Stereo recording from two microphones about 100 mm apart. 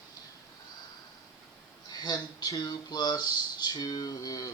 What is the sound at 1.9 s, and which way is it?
Speech, 40° left (ahead or behind).